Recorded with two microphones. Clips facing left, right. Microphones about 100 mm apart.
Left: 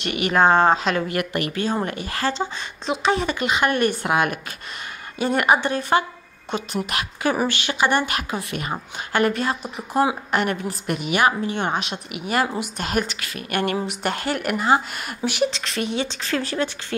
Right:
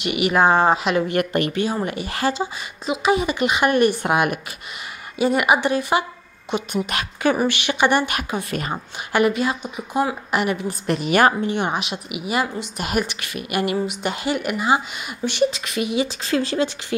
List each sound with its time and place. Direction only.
0.0 s speech: 10° right (ahead or behind)
1.0 s speech: 30° right (ahead or behind)
1.9 s speech: 15° right (ahead or behind)
6.9 s speech: 25° right (ahead or behind)
8.4 s a woman's voice: 35° right (ahead or behind)
9.1 s speech: 10° right (ahead or behind)
10.9 s a woman's voice: 40° right (ahead or behind)
11.5 s speech: 10° right (ahead or behind)